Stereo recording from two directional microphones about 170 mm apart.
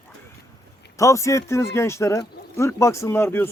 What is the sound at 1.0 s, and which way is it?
Speech, 15° left (ahead or behind).